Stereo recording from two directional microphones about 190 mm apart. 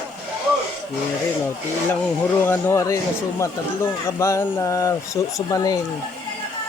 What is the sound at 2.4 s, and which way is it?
Speech, 15° left (ahead or behind).